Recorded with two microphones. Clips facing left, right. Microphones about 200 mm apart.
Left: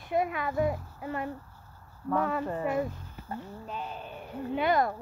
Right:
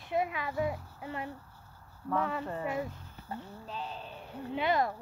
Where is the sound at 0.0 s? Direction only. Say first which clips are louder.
Left 3 dB; 50° left (ahead or behind).